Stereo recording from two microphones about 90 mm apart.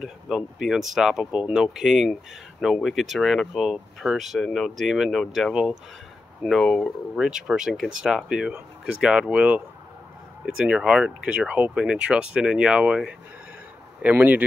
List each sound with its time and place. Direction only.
0.0 s speech: 5° right (ahead or behind)
7.2 s speech: 5° right (ahead or behind)
10.6 s speech: 10° right (ahead or behind)